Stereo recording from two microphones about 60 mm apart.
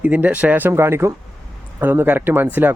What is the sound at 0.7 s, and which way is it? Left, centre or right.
A man's voice, right.